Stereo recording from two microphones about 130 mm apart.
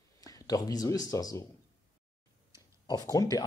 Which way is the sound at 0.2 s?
30° left (ahead or behind).